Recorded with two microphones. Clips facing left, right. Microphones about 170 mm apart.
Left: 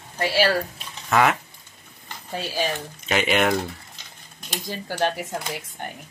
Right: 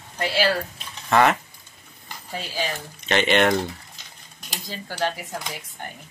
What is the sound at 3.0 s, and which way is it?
Speech, 5° left (ahead or behind).